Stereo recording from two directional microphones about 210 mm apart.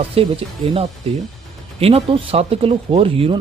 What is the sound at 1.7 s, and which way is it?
Speech, 30° right (ahead or behind).